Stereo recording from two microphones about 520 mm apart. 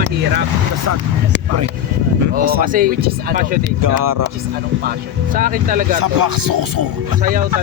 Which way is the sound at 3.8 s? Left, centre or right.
Right.